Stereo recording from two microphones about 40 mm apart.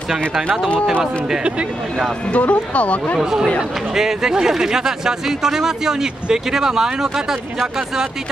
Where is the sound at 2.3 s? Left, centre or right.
Left.